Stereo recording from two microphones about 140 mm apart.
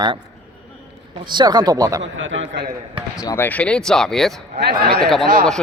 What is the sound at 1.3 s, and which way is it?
Speech, 35° right (ahead or behind).